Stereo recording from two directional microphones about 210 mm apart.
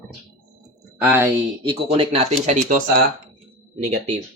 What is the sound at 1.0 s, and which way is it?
Speech, 10° right (ahead or behind).